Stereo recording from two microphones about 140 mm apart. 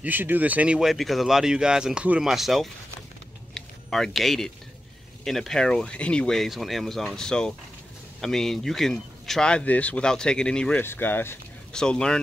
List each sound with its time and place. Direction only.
0.0 s speech: 15° right (ahead or behind)
3.5 s a sound: 5° left (ahead or behind)
5.2 s speech: centre (ahead or behind)